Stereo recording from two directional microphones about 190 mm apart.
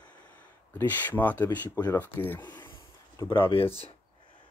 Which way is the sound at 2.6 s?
20° left (ahead or behind).